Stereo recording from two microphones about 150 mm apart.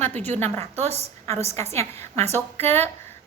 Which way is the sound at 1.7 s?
15° left (ahead or behind).